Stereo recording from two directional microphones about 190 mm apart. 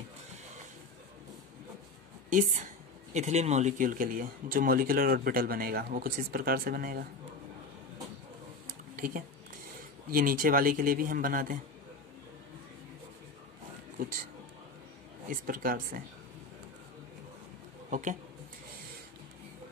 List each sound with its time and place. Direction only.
2.2 s a woman's voice: 40° right (ahead or behind)
8.6 s a sound: 45° right (ahead or behind)
10.1 s a woman's voice: 45° right (ahead or behind)
13.9 s speech: 50° right (ahead or behind)
15.2 s a woman's voice: 45° right (ahead or behind)
17.8 s speech: 40° right (ahead or behind)